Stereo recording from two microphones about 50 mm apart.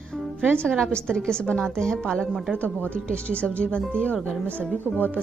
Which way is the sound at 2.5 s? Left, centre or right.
Left.